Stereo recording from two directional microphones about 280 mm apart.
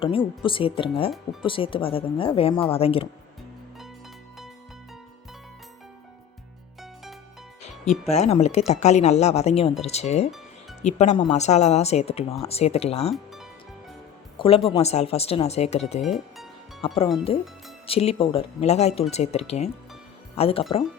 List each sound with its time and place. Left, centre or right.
0.0 s speech: centre
8.2 s speech: left
13.1 s music: centre
14.3 s speech: centre
16.0 s speech: centre
16.8 s speech: left